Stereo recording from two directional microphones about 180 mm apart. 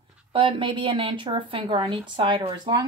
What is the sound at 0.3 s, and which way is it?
Speech, 30° right (ahead or behind).